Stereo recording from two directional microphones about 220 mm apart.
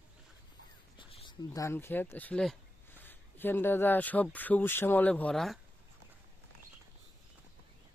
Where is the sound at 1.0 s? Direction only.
20° left (ahead or behind); by 5.6 s centre (ahead or behind).